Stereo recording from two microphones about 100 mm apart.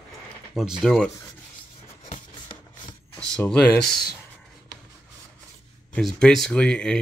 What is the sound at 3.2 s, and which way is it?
Speech, 10° left (ahead or behind).